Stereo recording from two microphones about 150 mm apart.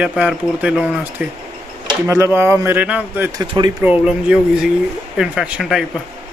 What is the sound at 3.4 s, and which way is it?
Speech, 30° right (ahead or behind).